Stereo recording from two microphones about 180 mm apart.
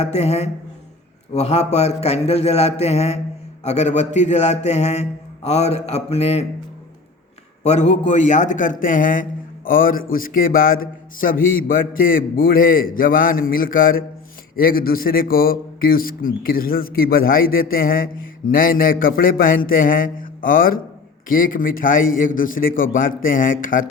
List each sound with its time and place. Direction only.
0.0 s a man's voice: 35° left (ahead or behind)
7.6 s speech: 40° left (ahead or behind)